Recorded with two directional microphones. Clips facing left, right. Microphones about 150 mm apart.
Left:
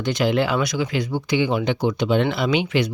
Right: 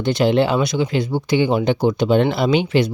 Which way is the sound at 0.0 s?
30° right (ahead or behind).